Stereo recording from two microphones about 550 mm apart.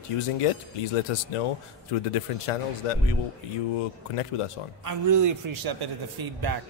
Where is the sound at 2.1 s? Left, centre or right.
Left.